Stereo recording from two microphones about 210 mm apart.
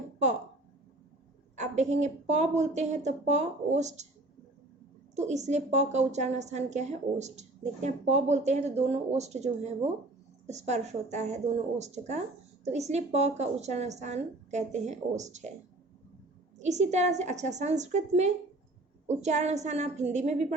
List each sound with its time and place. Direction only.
1.5 s a woman's voice: 35° right (ahead or behind)
5.1 s a woman's voice: 35° right (ahead or behind)
16.6 s a woman's voice: 35° right (ahead or behind)